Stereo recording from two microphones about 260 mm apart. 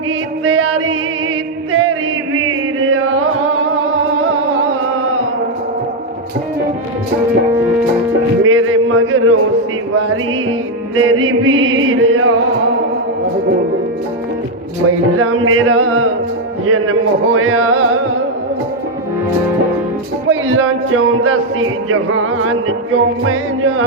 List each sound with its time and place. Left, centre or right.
0.4 s music: right
1.7 s chant: right
8.4 s a sound: right
10.9 s speech: right
14.8 s speech: right
20.2 s speech: right